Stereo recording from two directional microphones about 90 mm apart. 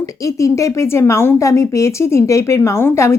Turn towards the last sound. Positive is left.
turn(degrees=30)  # may be behind; listen again after turning